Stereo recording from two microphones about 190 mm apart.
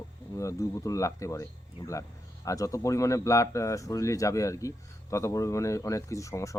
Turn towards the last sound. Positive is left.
turn(degrees=15)  # may be behind; listen again after turning